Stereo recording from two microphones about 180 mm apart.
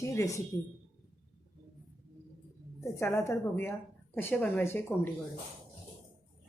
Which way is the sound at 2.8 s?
15° left (ahead or behind).